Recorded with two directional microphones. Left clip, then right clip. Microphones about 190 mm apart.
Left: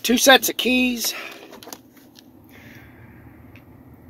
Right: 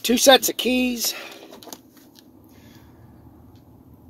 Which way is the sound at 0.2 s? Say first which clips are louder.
Even; 10° right (ahead or behind).